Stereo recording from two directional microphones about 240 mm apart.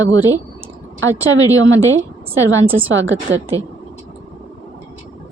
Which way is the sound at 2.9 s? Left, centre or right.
Right.